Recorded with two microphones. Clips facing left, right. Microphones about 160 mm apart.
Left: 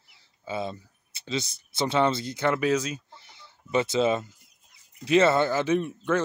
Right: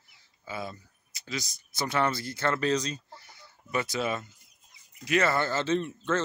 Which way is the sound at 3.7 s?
25° left (ahead or behind).